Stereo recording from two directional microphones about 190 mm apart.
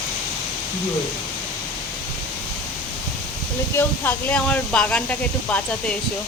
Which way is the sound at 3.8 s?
5° left (ahead or behind).